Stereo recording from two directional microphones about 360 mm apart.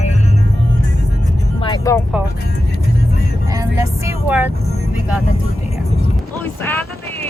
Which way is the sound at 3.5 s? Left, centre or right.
Centre.